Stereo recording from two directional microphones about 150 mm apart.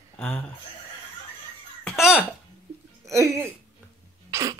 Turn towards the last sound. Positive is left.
turn(degrees=-25)  # may be behind; listen again after turning